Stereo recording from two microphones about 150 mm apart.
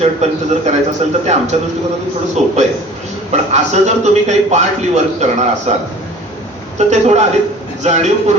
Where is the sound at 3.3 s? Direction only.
50° right (ahead or behind).